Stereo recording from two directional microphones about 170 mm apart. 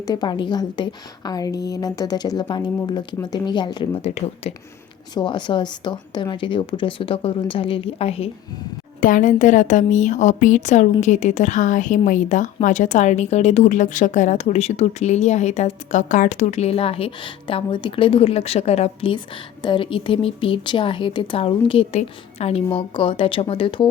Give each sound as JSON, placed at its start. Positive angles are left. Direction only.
{"t": 0.0, "sound": "speech", "side_deg": 25}
{"t": 4.0, "sound": "a woman's voice", "side_deg": 40}
{"t": 5.1, "sound": "speech", "side_deg": 30}
{"t": 9.0, "sound": "a woman's voice", "side_deg": 50}